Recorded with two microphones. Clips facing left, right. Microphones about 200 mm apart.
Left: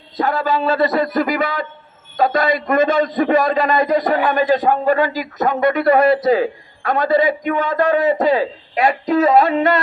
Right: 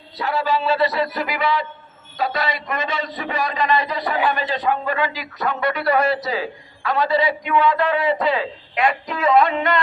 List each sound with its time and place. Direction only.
0.2 s a man's voice: 50° left (ahead or behind)